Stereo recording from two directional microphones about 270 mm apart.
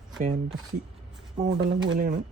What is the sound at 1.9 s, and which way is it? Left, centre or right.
Speech, right.